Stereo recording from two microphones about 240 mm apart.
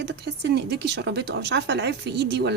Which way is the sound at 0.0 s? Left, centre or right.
Right.